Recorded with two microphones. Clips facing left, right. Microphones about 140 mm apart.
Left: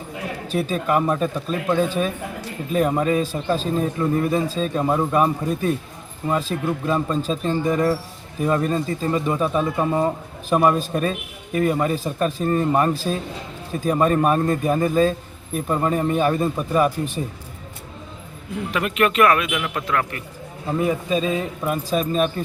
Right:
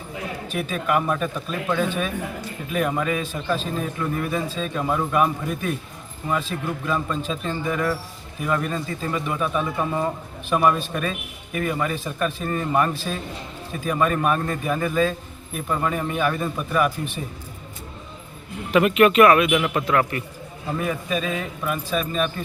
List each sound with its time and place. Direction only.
0.4 s a man's voice: 35° left (ahead or behind)
18.7 s a man's voice: 5° right (ahead or behind)
20.7 s speech: 25° left (ahead or behind)